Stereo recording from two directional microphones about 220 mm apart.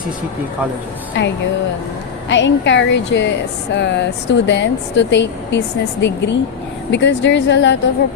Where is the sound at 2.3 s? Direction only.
55° left (ahead or behind).